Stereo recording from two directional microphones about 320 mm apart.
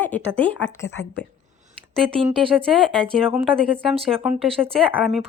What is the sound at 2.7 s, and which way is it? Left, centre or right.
A woman's voice, centre.